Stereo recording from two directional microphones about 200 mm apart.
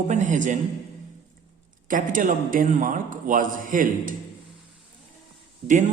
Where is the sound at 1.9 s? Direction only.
40° right (ahead or behind).